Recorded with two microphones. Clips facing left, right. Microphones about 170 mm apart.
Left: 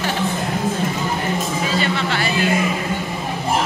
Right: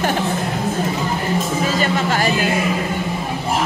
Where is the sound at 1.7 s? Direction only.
45° right (ahead or behind).